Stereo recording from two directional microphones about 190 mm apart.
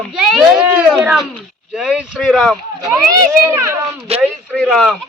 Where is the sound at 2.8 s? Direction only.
15° right (ahead or behind).